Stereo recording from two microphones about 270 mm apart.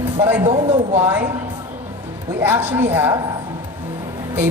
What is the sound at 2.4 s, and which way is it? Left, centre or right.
Speech, centre.